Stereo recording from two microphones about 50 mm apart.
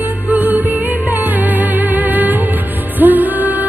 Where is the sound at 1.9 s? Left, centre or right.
Right.